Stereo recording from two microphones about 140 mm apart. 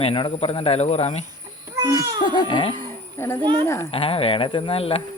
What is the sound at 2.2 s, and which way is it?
Speech, 35° left (ahead or behind).